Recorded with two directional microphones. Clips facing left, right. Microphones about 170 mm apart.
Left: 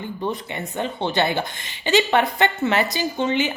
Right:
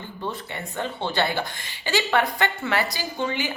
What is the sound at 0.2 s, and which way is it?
Speech, 15° left (ahead or behind).